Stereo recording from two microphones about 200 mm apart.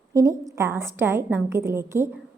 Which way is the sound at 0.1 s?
15° right (ahead or behind).